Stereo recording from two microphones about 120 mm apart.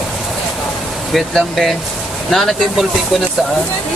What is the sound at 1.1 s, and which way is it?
Speech, centre (ahead or behind).